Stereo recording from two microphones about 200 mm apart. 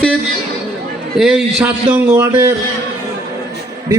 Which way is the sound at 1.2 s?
5° right (ahead or behind).